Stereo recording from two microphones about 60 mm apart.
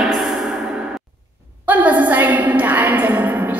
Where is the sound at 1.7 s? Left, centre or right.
Right.